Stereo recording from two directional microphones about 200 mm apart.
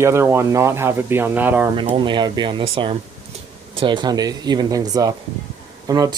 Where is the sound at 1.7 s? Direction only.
25° right (ahead or behind).